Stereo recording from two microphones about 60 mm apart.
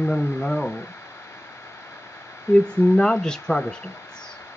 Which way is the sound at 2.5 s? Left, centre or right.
Left.